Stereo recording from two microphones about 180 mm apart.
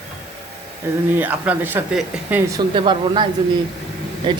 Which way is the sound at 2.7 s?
30° right (ahead or behind).